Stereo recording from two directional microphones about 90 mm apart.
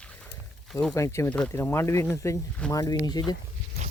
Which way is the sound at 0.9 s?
35° left (ahead or behind).